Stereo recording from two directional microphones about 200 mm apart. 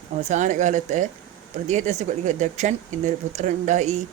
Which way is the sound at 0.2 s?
35° right (ahead or behind).